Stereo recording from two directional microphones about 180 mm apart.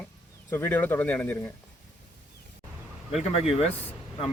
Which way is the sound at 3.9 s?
30° left (ahead or behind).